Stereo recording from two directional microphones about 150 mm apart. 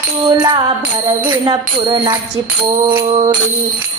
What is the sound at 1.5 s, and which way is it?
Music, 30° right (ahead or behind).